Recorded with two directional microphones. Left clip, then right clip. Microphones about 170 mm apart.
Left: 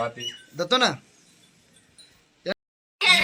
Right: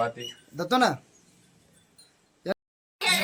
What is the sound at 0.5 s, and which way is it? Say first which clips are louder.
Speech: left 2 dB; 75° right (ahead or behind).